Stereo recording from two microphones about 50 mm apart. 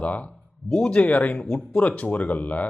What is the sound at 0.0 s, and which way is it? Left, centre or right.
Speech, left.